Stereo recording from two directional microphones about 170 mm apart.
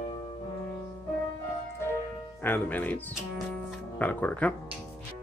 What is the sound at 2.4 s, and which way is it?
Speech, 10° left (ahead or behind).